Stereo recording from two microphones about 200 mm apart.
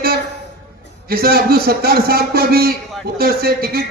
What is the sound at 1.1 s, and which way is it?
A man's voice, 50° right (ahead or behind).